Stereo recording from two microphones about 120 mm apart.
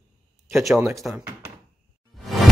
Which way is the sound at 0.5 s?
5° right (ahead or behind).